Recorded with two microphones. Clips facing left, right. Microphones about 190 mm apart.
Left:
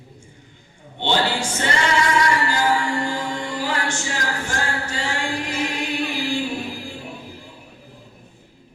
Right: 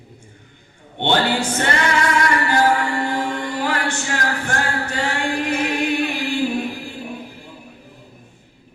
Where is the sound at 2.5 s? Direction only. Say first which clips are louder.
Right 3 dB; 60° right (ahead or behind).